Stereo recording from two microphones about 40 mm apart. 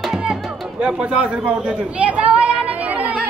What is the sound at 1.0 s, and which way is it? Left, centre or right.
Chatter, right.